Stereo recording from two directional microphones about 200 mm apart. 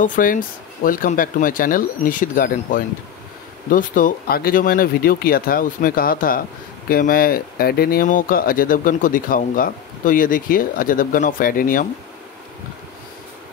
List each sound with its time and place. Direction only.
0.0 s speech: 40° left (ahead or behind)